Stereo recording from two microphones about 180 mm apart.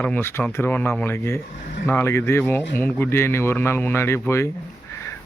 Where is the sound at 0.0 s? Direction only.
10° left (ahead or behind).